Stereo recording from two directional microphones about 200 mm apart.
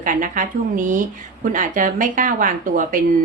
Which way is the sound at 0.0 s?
40° right (ahead or behind).